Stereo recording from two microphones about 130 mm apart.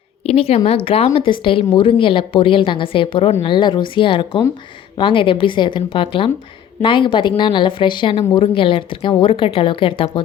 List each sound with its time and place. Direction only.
0.3 s a woman's voice: 50° left (ahead or behind)